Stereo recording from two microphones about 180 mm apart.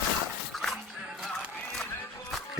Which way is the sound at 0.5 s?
Centre (ahead or behind).